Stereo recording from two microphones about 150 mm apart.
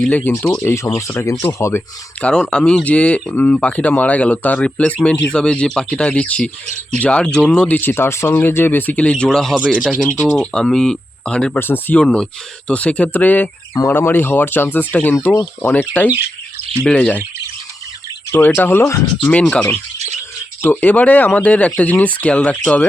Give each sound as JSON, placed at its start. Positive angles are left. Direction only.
{"t": 0.0, "sound": "speech", "side_deg": 10}
{"t": 2.2, "sound": "speech", "side_deg": 5}
{"t": 18.3, "sound": "speech", "side_deg": 15}
{"t": 19.3, "sound": "speech", "side_deg": 5}